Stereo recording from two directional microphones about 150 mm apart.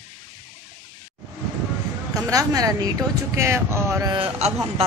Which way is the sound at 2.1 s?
25° right (ahead or behind).